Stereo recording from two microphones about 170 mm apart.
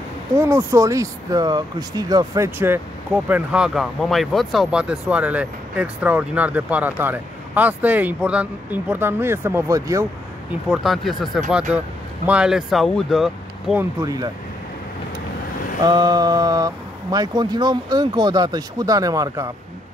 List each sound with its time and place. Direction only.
0.4 s speech: 15° right (ahead or behind)
10.7 s speech: centre (ahead or behind)
15.8 s speech: 25° right (ahead or behind)